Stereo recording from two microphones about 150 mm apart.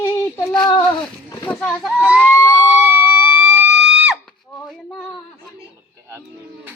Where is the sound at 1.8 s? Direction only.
10° right (ahead or behind).